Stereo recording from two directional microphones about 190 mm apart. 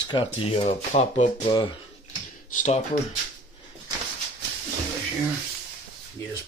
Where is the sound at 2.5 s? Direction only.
40° left (ahead or behind).